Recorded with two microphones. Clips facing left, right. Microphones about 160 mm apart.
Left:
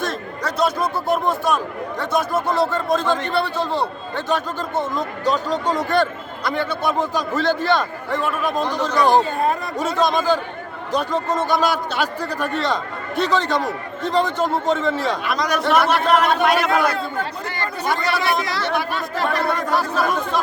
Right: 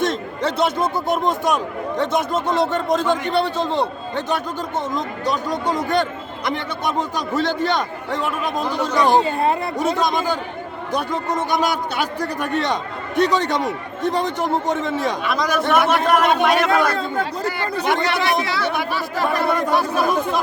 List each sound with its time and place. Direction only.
0.0 s a man's voice: 20° right (ahead or behind)
15.2 s a man's voice: centre (ahead or behind)
17.8 s a man's voice: 20° right (ahead or behind); by 19.5 s 5° right (ahead or behind)
19.7 s a man's voice: 15° right (ahead or behind)